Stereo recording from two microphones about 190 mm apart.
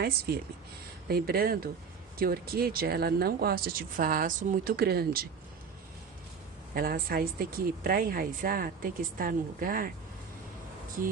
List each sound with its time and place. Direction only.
1.0 s speech: 55° right (ahead or behind)
6.7 s speech: 50° right (ahead or behind)